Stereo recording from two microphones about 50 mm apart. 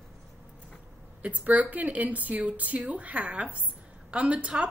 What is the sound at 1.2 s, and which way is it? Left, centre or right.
A woman's voice, right.